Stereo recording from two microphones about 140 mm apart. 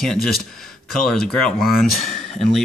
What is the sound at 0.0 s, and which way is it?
Speech, 5° left (ahead or behind).